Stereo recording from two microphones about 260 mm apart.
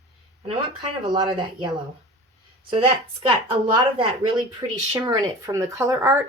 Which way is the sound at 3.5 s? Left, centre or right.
Centre.